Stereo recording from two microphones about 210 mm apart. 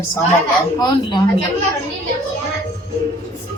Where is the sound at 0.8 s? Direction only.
20° left (ahead or behind).